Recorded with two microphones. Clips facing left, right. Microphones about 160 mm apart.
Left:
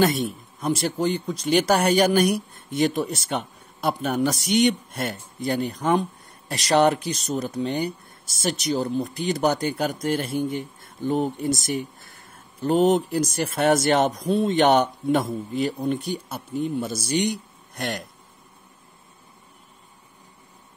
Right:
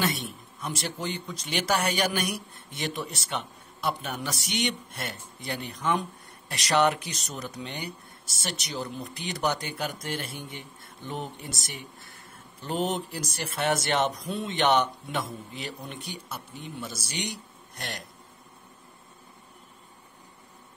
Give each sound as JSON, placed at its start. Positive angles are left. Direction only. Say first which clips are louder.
{"t": 0.0, "sound": "speech", "louder": "left 9 dB", "side_deg": 45}